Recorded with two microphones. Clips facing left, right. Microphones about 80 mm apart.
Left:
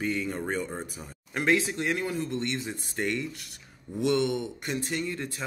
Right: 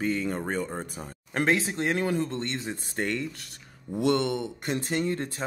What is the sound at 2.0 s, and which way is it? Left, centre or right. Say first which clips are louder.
Speech: right 4 dB; right.